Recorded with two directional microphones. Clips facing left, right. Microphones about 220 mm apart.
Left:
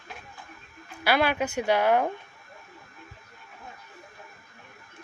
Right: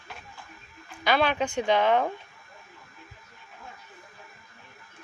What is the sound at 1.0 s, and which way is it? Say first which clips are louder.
Speech: even; 10° left (ahead or behind).